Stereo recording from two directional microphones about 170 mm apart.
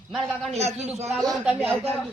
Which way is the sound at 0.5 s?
40° right (ahead or behind).